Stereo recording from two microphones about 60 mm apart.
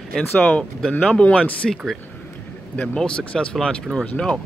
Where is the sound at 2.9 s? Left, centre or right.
Centre.